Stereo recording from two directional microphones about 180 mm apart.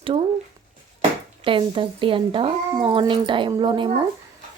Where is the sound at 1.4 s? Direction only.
30° right (ahead or behind).